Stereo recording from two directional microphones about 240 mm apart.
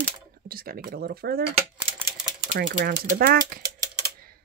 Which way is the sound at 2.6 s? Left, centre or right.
Right.